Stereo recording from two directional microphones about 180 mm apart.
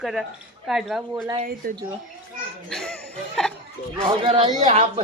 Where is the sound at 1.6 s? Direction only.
55° right (ahead or behind).